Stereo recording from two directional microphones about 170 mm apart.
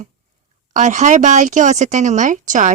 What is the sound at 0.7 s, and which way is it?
A woman's voice, 45° right (ahead or behind).